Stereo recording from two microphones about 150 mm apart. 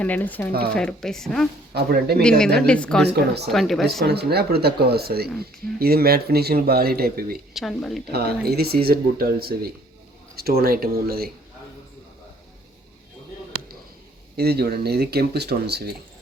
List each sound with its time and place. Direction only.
0.0 s a woman's voice: 10° left (ahead or behind)
1.7 s speech: 90° right
2.4 s a woman's voice: 5° left (ahead or behind)
4.0 s speech: 90° right
7.5 s a woman's voice: centre (ahead or behind)
8.1 s speech: 90° right
14.3 s speech: 90° right